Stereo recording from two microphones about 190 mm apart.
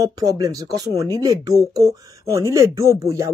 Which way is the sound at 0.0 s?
20° right (ahead or behind).